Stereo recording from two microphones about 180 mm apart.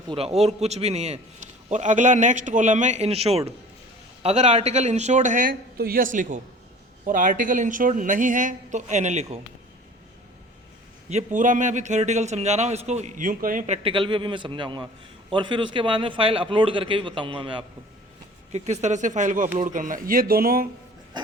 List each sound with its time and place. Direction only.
0.1 s a man's voice: 35° right (ahead or behind)
11.1 s a man's voice: 40° right (ahead or behind)
13.8 s a man's voice: 30° right (ahead or behind)
18.5 s speech: 40° right (ahead or behind); by 20.7 s 55° right (ahead or behind)